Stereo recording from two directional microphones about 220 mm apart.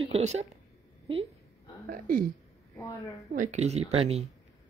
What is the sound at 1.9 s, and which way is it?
Speech, 40° right (ahead or behind).